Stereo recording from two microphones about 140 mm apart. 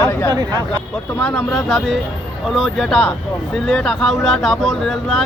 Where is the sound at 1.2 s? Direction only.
15° left (ahead or behind).